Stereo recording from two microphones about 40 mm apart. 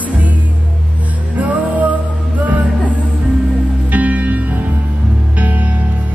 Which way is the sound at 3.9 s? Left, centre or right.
Right.